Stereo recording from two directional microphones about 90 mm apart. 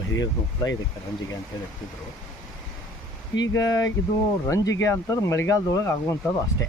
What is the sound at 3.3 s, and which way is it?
Speech, 45° left (ahead or behind).